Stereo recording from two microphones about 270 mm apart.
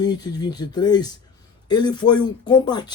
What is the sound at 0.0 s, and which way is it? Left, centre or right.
Speech, centre.